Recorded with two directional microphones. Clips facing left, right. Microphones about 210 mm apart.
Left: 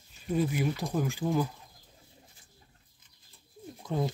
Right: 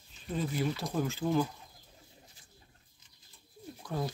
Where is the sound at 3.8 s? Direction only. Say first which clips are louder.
Left 4 dB; 20° left (ahead or behind).